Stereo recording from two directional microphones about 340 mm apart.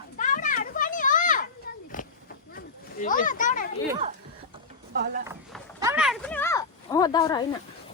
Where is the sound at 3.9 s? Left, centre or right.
Centre.